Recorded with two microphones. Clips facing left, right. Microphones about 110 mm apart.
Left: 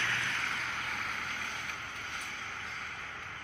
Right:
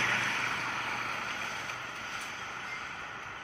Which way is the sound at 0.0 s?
65° right (ahead or behind).